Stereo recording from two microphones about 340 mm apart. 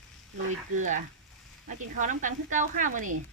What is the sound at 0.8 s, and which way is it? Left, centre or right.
Speech, right.